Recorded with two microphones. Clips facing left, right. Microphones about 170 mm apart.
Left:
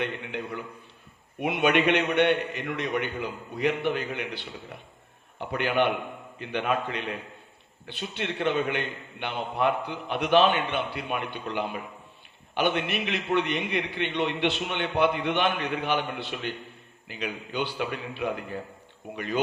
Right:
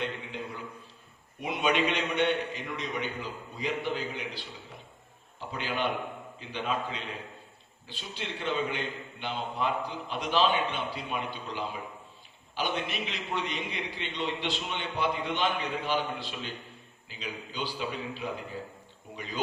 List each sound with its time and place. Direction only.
0.0 s a man's voice: 65° left (ahead or behind)